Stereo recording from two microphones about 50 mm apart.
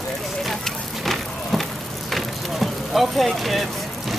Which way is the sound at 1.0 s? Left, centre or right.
Centre.